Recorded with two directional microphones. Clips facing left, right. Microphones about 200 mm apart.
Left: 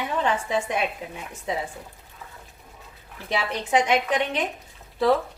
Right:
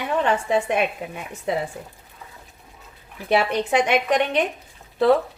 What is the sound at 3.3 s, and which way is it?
A woman's voice, 65° right (ahead or behind).